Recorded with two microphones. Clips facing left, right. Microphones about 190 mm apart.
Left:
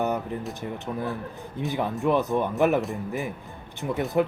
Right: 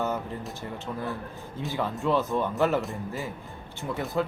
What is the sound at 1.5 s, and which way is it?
Speech, 15° left (ahead or behind).